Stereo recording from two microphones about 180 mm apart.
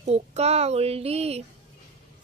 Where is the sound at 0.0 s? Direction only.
35° right (ahead or behind).